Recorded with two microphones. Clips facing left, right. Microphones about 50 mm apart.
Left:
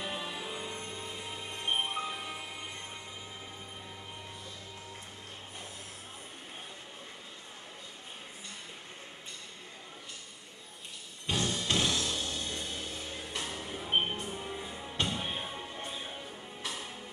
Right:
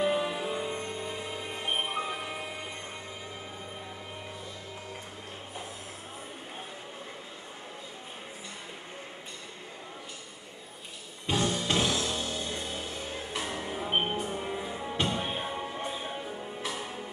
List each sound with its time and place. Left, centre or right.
0.0 s music: centre
11.2 s music: centre